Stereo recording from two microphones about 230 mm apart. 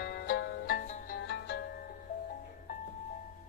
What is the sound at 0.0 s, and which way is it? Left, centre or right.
Music, left.